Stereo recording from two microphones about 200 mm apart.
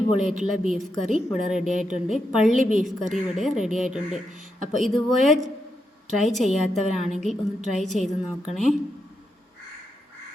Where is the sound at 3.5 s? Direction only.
35° right (ahead or behind).